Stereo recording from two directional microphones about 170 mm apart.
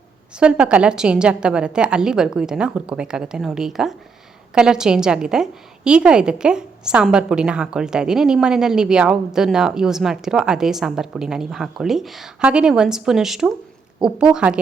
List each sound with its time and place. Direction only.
0.3 s a woman's voice: 5° right (ahead or behind)